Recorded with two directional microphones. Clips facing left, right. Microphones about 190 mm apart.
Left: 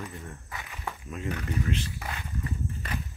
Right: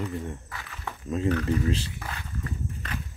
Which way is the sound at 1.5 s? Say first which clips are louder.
Right 5 dB; 30° right (ahead or behind).